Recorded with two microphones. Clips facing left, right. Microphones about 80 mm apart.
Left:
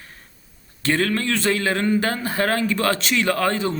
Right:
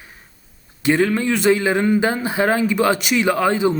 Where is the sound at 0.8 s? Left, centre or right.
Centre.